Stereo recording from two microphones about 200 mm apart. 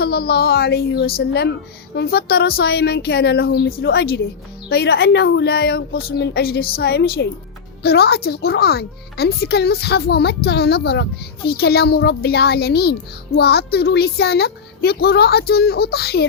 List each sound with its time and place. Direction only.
0.0 s a child's voice: 55° left (ahead or behind)